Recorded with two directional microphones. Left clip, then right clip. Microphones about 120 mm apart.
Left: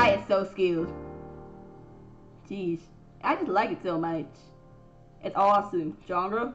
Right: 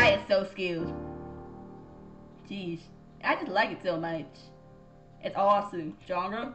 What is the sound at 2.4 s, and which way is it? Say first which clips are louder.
A woman's voice: left 6 dB; 35° right (ahead or behind).